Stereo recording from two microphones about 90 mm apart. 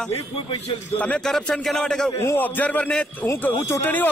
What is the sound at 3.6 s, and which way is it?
Speech, 30° left (ahead or behind).